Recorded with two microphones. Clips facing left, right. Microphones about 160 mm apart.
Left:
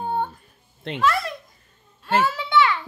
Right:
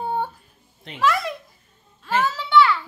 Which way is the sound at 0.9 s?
Centre (ahead or behind).